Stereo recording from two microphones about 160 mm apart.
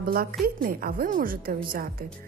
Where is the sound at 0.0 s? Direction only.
65° right (ahead or behind).